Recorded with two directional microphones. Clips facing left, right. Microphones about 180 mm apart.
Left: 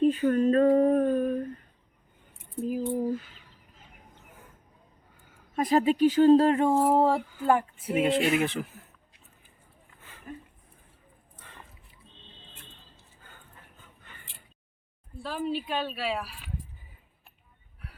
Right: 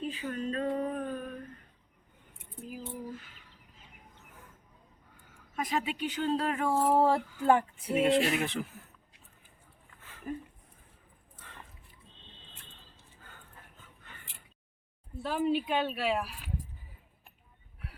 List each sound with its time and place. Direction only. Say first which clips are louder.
0.0 s a sound: left 13 dB; 50° left (ahead or behind)
2.6 s a sound: left 13 dB; 45° left (ahead or behind)
5.5 s speech: left 10 dB; 35° left (ahead or behind)
6.4 s speech: left 8 dB; 25° left (ahead or behind)
6.8 s speech: left 3 dB; 10° left (ahead or behind)
15.1 s speech: right 2 dB; 20° right (ahead or behind)